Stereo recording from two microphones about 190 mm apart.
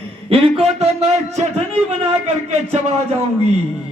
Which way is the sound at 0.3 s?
30° right (ahead or behind).